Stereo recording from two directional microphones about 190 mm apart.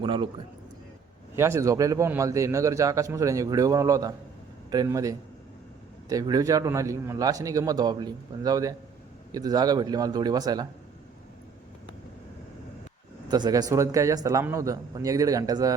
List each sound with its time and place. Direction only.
0.0 s a man's voice: 25° right (ahead or behind)
1.4 s a man's voice: 15° right (ahead or behind)
13.2 s a man's voice: 20° right (ahead or behind)